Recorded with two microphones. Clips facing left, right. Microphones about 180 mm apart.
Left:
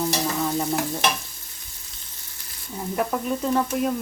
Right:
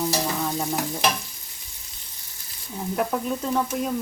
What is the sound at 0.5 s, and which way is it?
Stir, centre (ahead or behind).